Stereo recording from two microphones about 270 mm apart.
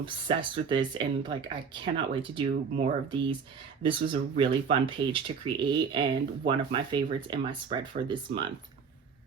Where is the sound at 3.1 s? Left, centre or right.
Centre.